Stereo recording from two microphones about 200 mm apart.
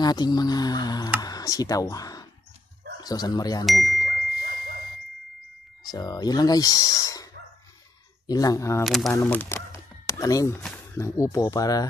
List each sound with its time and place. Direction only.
0.0 s speech: 20° left (ahead or behind)
4.0 s a sound: 55° right (ahead or behind)
5.9 s speech: 20° left (ahead or behind)
8.3 s speech: 20° left (ahead or behind)
8.8 s speech: centre (ahead or behind); by 11.8 s 20° left (ahead or behind)